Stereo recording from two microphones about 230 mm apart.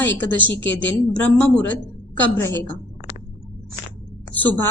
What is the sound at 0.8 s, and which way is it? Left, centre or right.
A woman's voice, centre.